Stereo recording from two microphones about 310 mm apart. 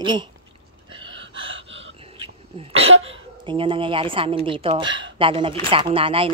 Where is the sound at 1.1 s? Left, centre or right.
Right.